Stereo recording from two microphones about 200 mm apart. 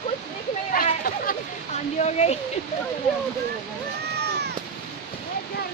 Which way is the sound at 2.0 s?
35° left (ahead or behind).